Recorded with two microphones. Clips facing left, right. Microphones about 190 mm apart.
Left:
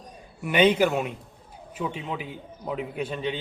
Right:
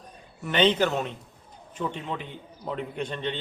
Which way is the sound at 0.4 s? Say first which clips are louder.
Left 2 dB; 10° left (ahead or behind).